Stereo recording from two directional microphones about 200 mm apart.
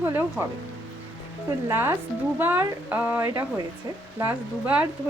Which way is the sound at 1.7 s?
10° right (ahead or behind).